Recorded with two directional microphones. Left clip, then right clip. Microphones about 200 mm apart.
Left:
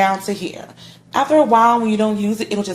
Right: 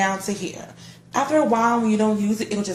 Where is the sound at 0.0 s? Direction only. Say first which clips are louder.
Left 6 dB; 35° left (ahead or behind).